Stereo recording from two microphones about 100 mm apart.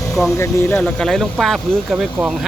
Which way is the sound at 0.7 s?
10° left (ahead or behind).